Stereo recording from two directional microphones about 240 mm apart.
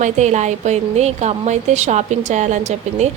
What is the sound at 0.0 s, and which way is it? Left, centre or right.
Speech, right.